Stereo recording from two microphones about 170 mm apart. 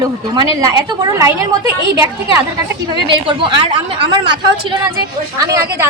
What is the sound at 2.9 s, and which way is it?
A woman's voice, 30° right (ahead or behind).